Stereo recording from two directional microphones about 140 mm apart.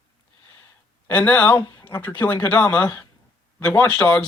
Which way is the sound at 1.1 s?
15° left (ahead or behind).